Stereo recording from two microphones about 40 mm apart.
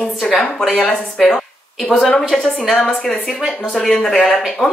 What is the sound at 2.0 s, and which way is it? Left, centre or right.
Speech, centre.